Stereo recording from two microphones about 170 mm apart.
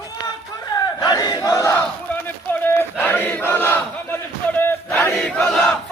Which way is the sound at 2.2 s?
10° left (ahead or behind).